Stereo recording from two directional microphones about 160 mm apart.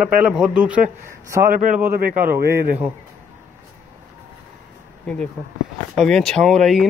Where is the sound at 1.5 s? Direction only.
55° right (ahead or behind).